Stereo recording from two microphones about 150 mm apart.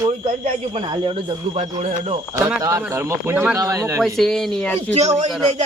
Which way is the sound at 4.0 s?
Centre (ahead or behind).